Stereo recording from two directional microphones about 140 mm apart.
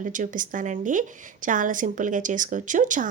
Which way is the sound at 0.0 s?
70° right (ahead or behind).